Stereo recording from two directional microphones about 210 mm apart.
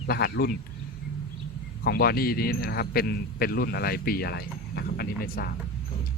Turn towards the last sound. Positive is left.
turn(degrees=45)  # may be behind; listen again after turning